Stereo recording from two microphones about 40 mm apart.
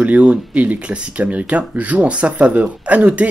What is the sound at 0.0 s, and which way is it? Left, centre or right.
Speech, right.